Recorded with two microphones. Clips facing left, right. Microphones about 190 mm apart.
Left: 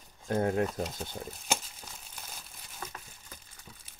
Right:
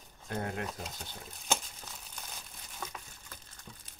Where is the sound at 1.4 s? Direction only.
5° left (ahead or behind).